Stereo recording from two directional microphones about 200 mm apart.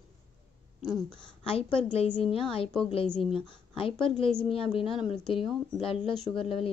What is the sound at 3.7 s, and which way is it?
A woman's voice, 25° left (ahead or behind).